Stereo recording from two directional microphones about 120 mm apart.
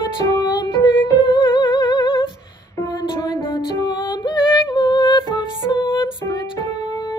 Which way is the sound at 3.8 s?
40° left (ahead or behind).